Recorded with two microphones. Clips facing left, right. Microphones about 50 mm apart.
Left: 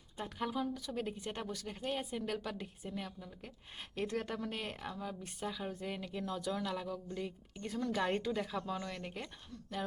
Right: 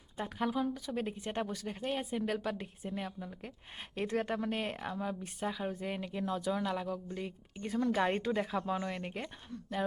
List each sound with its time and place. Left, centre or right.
0.2 s a woman's voice: centre